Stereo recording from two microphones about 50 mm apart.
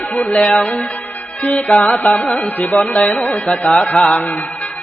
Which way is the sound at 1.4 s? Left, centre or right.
Left.